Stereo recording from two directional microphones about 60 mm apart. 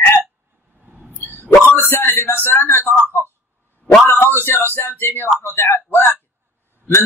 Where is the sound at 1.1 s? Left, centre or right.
Left.